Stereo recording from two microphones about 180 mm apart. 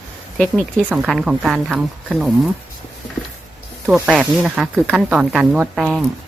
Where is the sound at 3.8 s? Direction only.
5° right (ahead or behind).